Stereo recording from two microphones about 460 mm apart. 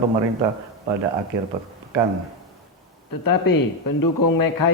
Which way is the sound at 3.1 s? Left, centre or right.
Left.